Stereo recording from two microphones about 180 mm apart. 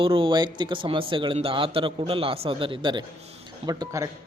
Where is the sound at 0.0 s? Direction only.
30° right (ahead or behind).